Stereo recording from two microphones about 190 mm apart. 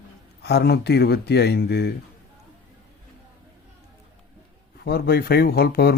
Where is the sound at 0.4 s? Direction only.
60° left (ahead or behind).